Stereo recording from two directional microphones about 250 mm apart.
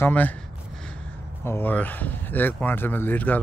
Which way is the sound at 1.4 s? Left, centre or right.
Centre.